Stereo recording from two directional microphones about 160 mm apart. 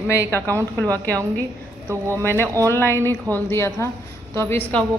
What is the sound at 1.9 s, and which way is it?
Speech, 15° right (ahead or behind).